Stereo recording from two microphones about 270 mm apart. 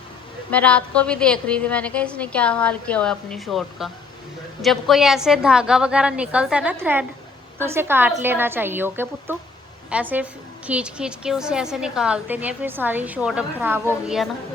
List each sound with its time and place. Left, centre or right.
0.5 s a woman's voice: centre